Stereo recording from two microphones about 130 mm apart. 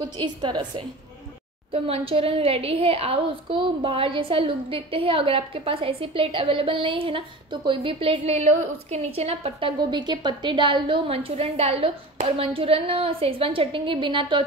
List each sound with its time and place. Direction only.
0.2 s a woman's voice: 35° right (ahead or behind)
1.7 s a woman's voice: 50° right (ahead or behind)